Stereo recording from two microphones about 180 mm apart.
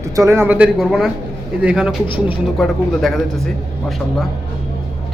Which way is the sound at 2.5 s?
Centre (ahead or behind).